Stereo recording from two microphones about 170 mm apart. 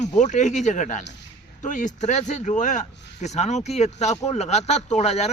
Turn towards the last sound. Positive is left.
turn(degrees=40)  # may be behind; listen again after turning